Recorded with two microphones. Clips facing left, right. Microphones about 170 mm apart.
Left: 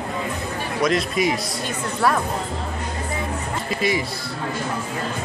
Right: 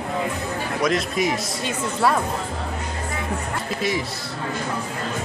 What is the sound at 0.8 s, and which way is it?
Speech, centre (ahead or behind).